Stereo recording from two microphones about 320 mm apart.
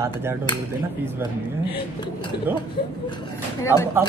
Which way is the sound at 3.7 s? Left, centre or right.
Centre.